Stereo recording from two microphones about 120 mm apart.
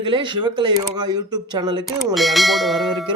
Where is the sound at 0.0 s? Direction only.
40° right (ahead or behind).